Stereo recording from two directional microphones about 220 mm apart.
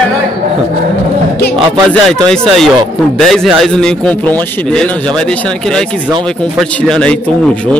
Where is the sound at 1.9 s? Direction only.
5° left (ahead or behind).